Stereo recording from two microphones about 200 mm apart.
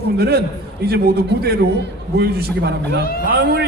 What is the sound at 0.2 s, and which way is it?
A man's voice, 50° right (ahead or behind).